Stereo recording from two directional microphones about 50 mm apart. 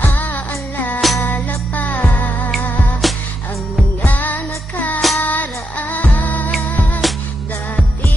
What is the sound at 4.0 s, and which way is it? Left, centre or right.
Music, left.